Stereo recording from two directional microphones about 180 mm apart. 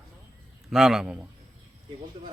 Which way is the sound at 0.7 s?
Centre (ahead or behind).